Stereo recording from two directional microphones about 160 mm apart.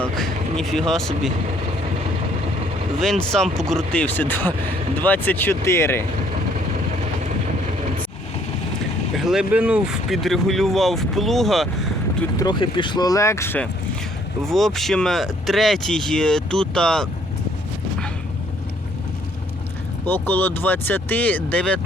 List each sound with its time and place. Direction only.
0.0 s speech: centre (ahead or behind)
3.0 s speech: 5° left (ahead or behind)
9.1 s speech: 5° right (ahead or behind)
12.4 s speech: 30° left (ahead or behind)
14.4 s speech: centre (ahead or behind)
20.1 s speech: 10° left (ahead or behind)